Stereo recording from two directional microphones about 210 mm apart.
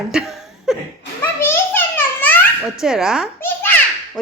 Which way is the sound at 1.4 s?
10° left (ahead or behind).